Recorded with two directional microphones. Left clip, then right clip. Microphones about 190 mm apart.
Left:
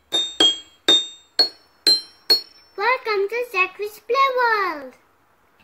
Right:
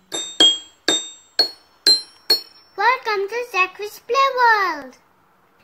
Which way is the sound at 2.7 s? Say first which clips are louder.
Right 2 dB; 50° right (ahead or behind).